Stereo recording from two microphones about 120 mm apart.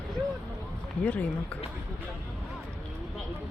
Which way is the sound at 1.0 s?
10° left (ahead or behind).